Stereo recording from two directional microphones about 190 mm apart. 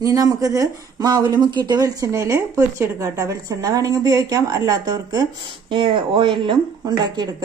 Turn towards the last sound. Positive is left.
turn(degrees=-20)  # may be behind; listen again after turning